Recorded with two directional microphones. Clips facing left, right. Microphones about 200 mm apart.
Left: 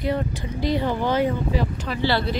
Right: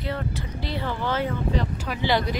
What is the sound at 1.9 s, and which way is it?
Speech, 15° right (ahead or behind).